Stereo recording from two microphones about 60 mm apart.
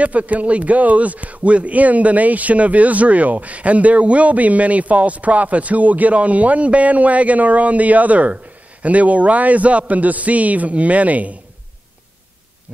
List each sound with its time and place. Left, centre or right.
0.0 s a man's voice: right